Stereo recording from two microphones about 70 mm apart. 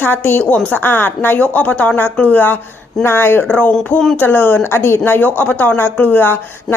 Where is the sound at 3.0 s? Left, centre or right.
Left.